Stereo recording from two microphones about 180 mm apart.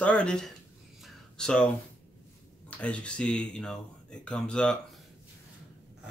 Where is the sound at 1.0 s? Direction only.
Centre (ahead or behind).